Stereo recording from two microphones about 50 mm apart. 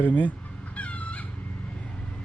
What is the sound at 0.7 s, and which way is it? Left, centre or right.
Chicken, left.